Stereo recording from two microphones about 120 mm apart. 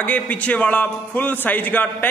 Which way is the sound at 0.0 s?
15° left (ahead or behind).